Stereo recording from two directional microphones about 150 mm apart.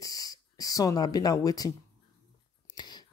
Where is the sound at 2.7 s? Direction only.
30° left (ahead or behind).